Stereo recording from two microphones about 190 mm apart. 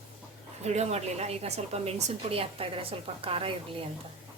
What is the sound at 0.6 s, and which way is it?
A woman's voice, 35° right (ahead or behind).